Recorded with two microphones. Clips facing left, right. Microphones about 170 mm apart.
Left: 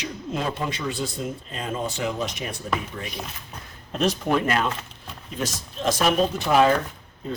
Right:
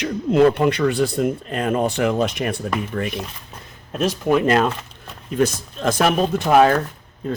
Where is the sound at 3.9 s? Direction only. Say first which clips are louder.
Right 4 dB; 5° right (ahead or behind).